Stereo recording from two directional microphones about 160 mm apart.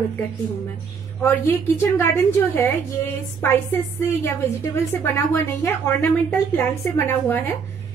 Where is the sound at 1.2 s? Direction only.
15° left (ahead or behind).